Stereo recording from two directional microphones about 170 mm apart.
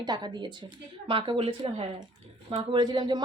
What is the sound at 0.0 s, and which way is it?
A woman's voice, 25° right (ahead or behind).